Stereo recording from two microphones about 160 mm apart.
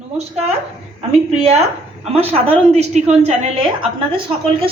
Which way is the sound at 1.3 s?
40° right (ahead or behind).